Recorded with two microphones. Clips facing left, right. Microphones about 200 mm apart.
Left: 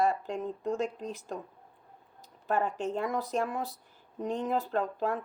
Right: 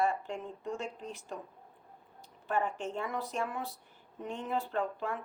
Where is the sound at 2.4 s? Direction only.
40° left (ahead or behind).